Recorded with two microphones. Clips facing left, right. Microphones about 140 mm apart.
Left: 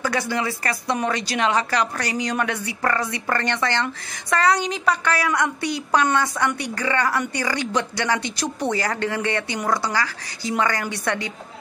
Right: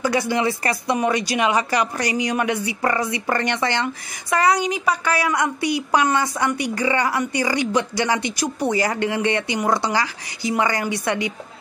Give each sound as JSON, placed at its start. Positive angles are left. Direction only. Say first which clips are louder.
{"t": 0.0, "sound": "a woman's voice", "louder": "right 4 dB", "side_deg": -15}